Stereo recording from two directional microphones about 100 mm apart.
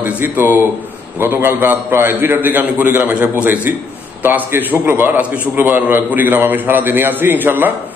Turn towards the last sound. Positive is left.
turn(degrees=-20)  # may be behind; listen again after turning